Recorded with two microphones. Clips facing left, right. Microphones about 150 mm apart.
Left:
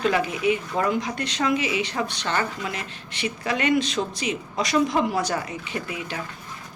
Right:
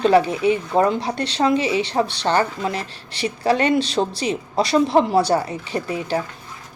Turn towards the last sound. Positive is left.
turn(degrees=-35)  # may be behind; listen again after turning